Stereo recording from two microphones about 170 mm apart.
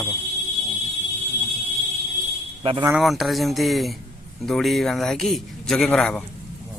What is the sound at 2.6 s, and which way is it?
Speech, 30° right (ahead or behind).